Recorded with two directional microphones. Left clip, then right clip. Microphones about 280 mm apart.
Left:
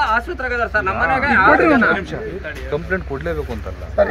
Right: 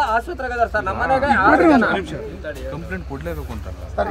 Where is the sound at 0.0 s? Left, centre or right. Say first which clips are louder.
Left 2 dB; centre.